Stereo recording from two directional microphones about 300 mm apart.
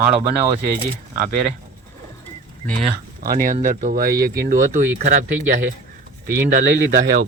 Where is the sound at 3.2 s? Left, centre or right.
Right.